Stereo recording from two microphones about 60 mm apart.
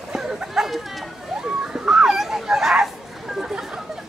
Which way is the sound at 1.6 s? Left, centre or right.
Centre.